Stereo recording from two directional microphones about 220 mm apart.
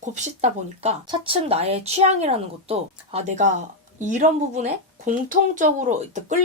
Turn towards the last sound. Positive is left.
turn(degrees=-35)  # may be behind; listen again after turning